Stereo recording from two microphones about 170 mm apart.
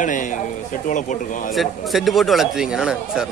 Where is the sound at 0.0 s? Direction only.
50° left (ahead or behind).